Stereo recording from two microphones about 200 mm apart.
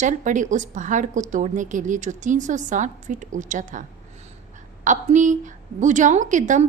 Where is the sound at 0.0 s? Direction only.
40° right (ahead or behind).